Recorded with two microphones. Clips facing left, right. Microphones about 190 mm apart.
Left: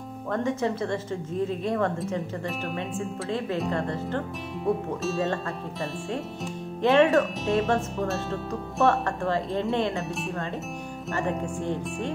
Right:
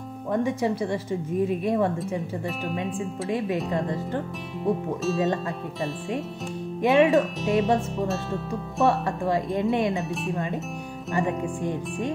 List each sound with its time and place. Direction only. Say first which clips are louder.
0.3 s speech: right 2 dB; 15° right (ahead or behind)
3.3 s speech: right 2 dB; 15° right (ahead or behind)
4.6 s speech: right 2 dB; centre (ahead or behind)
6.8 s speech: even; 15° right (ahead or behind)
7.1 s speech: right 1 dB; centre (ahead or behind)
8.8 s speech: right 1 dB; 15° right (ahead or behind)
11.1 s speech: right 3 dB; 15° right (ahead or behind)